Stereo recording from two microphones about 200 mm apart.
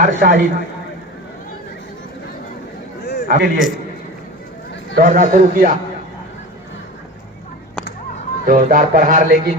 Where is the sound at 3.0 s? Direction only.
55° left (ahead or behind).